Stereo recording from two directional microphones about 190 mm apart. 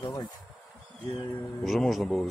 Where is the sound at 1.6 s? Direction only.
Centre (ahead or behind).